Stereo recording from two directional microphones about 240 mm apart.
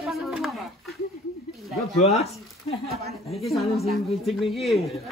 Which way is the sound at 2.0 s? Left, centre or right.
Left.